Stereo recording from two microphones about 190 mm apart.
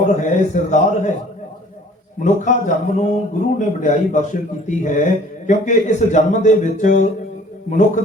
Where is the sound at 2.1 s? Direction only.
40° left (ahead or behind).